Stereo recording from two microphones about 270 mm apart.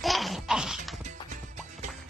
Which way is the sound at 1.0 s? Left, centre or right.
Right.